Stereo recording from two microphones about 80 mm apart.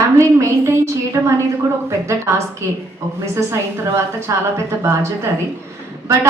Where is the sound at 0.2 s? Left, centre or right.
Right.